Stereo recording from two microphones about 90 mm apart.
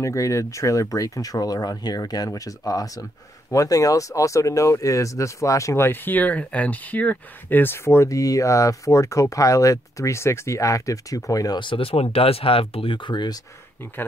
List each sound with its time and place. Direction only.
0.0 s speech: 35° left (ahead or behind)
11.6 s speech: 80° left; by 13.4 s 55° left (ahead or behind)